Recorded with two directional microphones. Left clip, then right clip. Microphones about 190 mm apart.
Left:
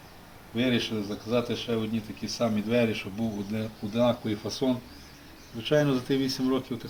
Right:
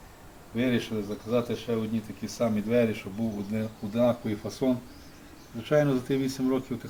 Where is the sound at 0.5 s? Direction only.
20° right (ahead or behind).